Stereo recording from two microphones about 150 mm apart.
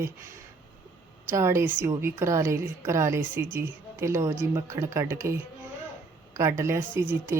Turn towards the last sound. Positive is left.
turn(degrees=-15)  # may be behind; listen again after turning